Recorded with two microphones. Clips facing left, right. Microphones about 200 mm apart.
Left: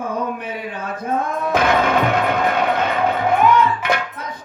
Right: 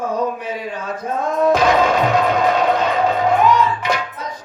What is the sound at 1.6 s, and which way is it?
Music, 55° left (ahead or behind).